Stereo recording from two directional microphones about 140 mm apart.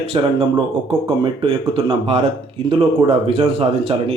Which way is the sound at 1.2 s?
35° right (ahead or behind).